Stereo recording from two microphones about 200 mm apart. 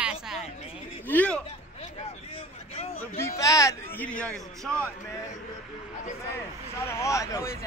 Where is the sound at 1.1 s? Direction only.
10° left (ahead or behind).